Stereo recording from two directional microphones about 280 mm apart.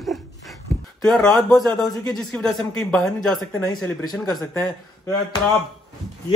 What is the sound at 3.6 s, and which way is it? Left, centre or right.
Speech, centre.